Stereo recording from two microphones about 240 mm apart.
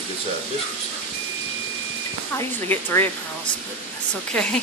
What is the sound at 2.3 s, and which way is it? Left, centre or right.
Speech, centre.